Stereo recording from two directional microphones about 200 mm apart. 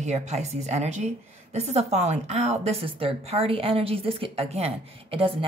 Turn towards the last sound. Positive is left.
turn(degrees=-25)  # may be behind; listen again after turning